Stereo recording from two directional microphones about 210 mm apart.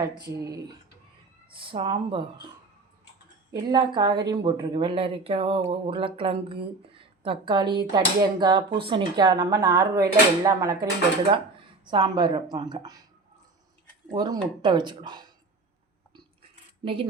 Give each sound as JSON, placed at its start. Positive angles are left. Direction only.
{"t": 0.3, "sound": "speech", "side_deg": -15}
{"t": 3.5, "sound": "speech", "side_deg": -20}
{"t": 11.9, "sound": "speech", "side_deg": -20}
{"t": 14.1, "sound": "speech", "side_deg": -20}
{"t": 16.8, "sound": "speech", "side_deg": -25}